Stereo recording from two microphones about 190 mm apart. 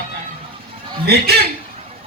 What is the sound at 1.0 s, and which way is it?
Speech, 55° right (ahead or behind).